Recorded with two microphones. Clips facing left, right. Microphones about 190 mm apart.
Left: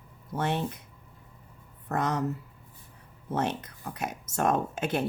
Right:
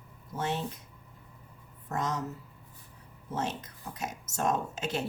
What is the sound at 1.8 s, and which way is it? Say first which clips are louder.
Speech: left 4 dB; 60° left (ahead or behind).